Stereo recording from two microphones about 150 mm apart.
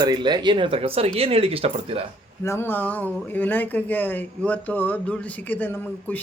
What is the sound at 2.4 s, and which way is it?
Speech, 15° left (ahead or behind).